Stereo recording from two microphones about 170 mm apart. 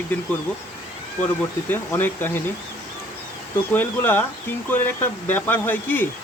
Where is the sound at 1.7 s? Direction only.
10° left (ahead or behind).